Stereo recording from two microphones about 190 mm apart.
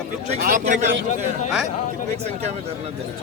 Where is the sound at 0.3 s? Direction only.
40° right (ahead or behind).